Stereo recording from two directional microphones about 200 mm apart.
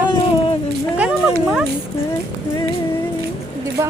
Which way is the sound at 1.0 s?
5° right (ahead or behind).